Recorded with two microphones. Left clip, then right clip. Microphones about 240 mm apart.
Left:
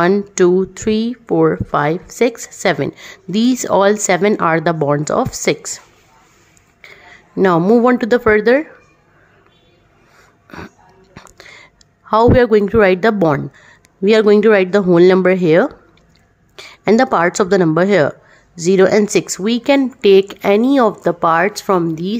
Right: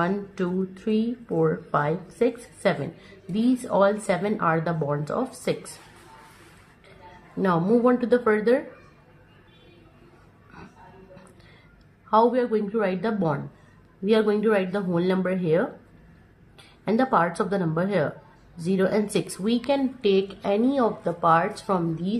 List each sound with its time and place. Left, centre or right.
0.0 s speech: left
7.4 s speech: left
12.1 s speech: left